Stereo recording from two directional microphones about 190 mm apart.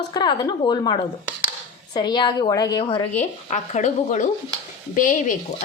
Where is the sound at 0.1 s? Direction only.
20° left (ahead or behind).